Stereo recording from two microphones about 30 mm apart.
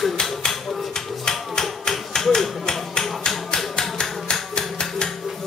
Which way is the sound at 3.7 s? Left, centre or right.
Left.